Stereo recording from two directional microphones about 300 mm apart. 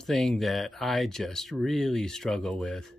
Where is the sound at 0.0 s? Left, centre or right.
Centre.